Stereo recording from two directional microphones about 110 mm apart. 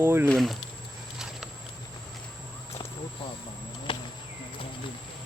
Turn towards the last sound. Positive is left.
turn(degrees=50)  # may be behind; listen again after turning